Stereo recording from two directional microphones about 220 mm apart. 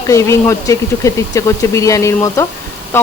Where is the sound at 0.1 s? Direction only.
15° left (ahead or behind).